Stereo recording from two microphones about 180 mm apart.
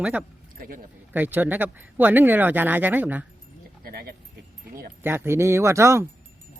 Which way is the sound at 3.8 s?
55° right (ahead or behind).